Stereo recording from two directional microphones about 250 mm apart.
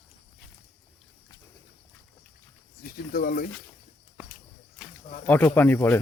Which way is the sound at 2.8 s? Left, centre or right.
Left.